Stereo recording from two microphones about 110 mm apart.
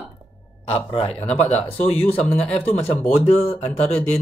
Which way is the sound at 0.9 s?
70° left (ahead or behind).